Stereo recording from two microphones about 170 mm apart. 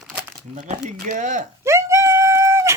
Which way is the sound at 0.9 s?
55° right (ahead or behind).